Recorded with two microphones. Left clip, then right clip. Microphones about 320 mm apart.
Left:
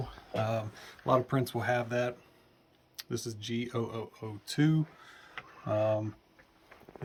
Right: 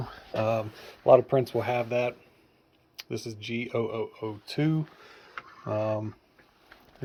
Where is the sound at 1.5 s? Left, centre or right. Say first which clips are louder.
Right 3 dB; centre.